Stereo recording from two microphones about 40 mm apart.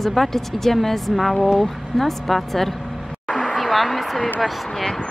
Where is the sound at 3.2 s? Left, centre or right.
Centre.